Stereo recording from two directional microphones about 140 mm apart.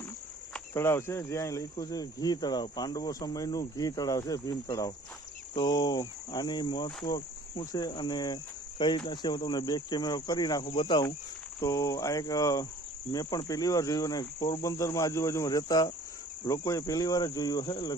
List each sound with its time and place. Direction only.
0.7 s speech: 20° left (ahead or behind); by 11.0 s 35° left (ahead or behind)
11.6 s speech: 20° left (ahead or behind)